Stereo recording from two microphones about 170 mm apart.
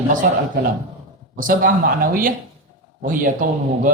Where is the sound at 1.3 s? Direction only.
55° right (ahead or behind).